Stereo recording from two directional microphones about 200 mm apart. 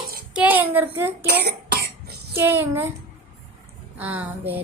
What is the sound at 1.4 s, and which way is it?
Cough, 55° right (ahead or behind).